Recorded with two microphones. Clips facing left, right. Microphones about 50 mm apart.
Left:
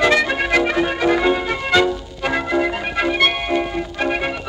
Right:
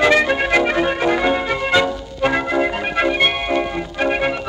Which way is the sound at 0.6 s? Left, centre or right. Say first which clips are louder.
Right 1 dB; centre.